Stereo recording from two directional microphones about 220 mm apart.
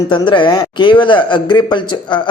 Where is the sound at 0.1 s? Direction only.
20° left (ahead or behind).